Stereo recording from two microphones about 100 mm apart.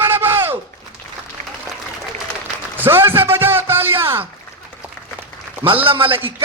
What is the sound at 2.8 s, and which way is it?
A man's voice, 25° right (ahead or behind).